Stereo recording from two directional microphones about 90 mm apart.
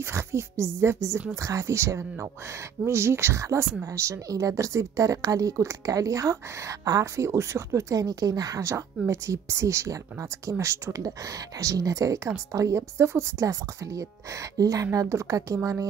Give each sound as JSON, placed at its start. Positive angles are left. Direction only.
{"t": 0.0, "sound": "a woman's voice", "side_deg": -30}